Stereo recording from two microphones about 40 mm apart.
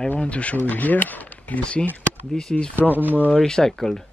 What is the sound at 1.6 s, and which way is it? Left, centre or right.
Speech, left.